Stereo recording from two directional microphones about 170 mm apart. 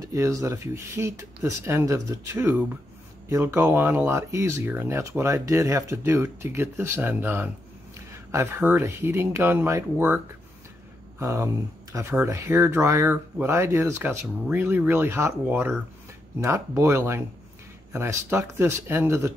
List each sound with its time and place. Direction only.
0.0 s speech: 20° right (ahead or behind)